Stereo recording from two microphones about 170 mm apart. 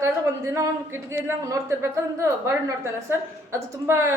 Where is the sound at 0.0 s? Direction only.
15° right (ahead or behind).